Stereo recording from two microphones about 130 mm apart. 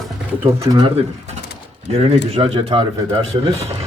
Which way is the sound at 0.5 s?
25° right (ahead or behind).